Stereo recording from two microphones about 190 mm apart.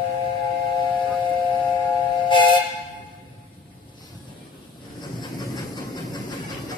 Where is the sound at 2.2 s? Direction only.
25° left (ahead or behind).